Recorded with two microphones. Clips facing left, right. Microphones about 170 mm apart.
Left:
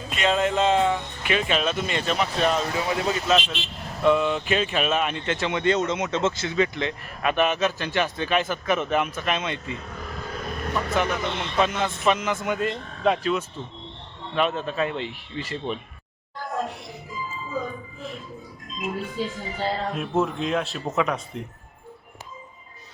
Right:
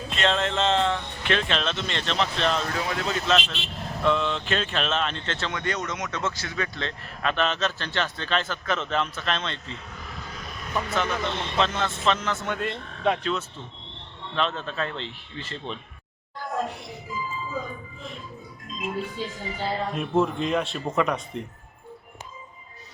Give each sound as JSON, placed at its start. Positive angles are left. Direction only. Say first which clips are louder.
{"t": 0.1, "sound": "speech", "louder": "left 3 dB", "side_deg": 5}
{"t": 10.3, "sound": "vehicle", "louder": "left 3 dB", "side_deg": 55}
{"t": 10.9, "sound": "speech", "louder": "left 2 dB", "side_deg": 15}
{"t": 16.5, "sound": "music", "louder": "even", "side_deg": 0}
{"t": 19.9, "sound": "speech", "louder": "right 1 dB", "side_deg": 0}